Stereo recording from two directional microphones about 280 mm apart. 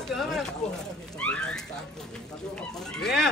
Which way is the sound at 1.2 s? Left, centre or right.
Centre.